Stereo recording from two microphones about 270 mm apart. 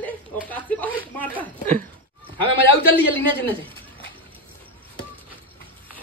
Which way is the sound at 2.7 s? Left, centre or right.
Centre.